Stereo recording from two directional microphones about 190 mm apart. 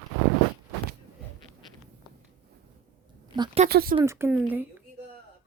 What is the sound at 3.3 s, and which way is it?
Speech, 25° right (ahead or behind).